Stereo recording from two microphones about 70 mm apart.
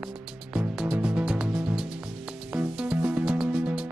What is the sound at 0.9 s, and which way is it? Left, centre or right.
Music, centre.